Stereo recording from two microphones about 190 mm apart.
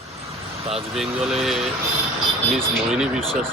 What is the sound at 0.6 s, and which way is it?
Speech, 30° right (ahead or behind).